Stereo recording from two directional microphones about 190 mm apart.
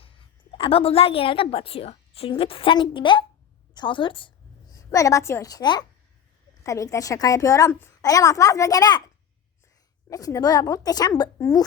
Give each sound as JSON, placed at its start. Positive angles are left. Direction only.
{"t": 0.0, "sound": "a woman's voice", "side_deg": 30}
{"t": 10.1, "sound": "a woman's voice", "side_deg": 20}